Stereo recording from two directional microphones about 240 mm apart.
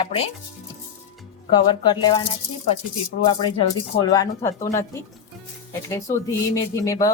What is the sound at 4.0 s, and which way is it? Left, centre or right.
Speech, centre.